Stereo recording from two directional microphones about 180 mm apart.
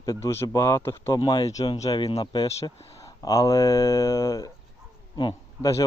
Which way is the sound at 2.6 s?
15° left (ahead or behind).